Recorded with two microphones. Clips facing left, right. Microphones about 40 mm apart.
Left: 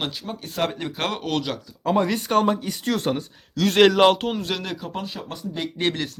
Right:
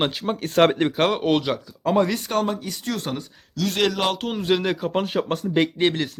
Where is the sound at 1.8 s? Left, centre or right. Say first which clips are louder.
Right 1 dB; centre.